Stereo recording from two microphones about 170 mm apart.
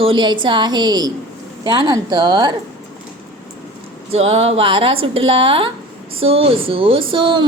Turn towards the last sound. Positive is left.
turn(degrees=-30)  # may be behind; listen again after turning